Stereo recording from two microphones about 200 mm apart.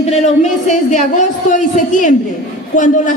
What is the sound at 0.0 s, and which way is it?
A woman's voice, 35° left (ahead or behind).